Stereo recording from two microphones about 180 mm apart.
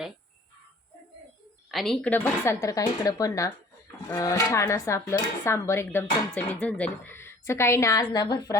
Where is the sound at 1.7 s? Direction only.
Centre (ahead or behind).